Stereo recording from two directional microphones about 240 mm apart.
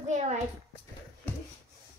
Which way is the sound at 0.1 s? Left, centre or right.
Right.